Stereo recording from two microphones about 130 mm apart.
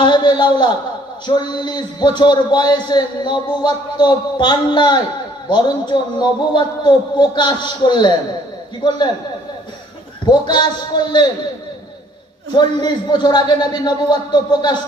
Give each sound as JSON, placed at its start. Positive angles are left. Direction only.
{"t": 0.0, "sound": "a sound", "side_deg": 35}
{"t": 1.3, "sound": "a man's voice", "side_deg": 35}
{"t": 10.2, "sound": "a man's voice", "side_deg": 35}
{"t": 12.5, "sound": "a man's voice", "side_deg": 35}